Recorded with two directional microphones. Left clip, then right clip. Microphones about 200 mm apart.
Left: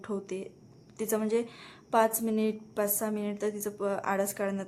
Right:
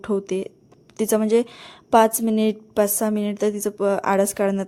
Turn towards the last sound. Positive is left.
turn(degrees=-40)  # may be behind; listen again after turning